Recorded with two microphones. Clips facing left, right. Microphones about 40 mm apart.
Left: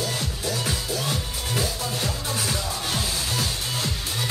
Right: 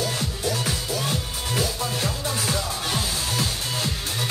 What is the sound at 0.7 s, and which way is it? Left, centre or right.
Music, centre.